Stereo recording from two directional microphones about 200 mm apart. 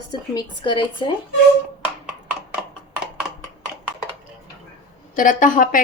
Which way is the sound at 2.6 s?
Centre (ahead or behind).